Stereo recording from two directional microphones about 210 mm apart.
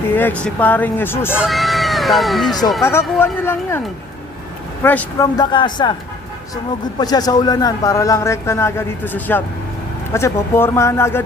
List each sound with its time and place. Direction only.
0.2 s a man's voice: 10° left (ahead or behind)
1.4 s speech: centre (ahead or behind)
2.8 s a man's voice: 10° left (ahead or behind)
4.8 s speech: 10° left (ahead or behind)
7.0 s a man's voice: 20° left (ahead or behind)